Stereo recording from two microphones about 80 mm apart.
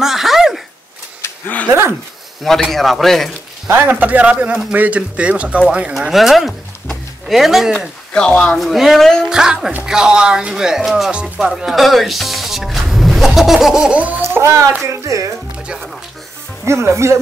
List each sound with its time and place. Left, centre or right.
0.0 s a sound: centre
2.4 s speech: centre
3.9 s speech: centre
5.9 s speech: centre
8.1 s speech: centre
13.7 s speech: centre
14.2 s speech: right
16.6 s speech: right